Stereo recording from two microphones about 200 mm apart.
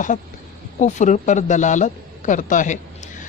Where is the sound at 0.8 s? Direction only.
35° left (ahead or behind).